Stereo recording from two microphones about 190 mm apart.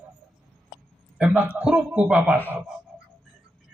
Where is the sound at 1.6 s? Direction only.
5° right (ahead or behind).